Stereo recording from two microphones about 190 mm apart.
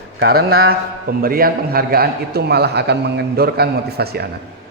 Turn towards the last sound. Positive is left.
turn(degrees=-55)  # may be behind; listen again after turning